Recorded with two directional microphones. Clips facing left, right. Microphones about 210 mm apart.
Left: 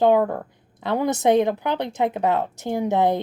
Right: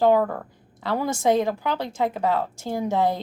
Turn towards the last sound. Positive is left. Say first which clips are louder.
# left 3 dB
turn(degrees=20)  # may be behind; listen again after turning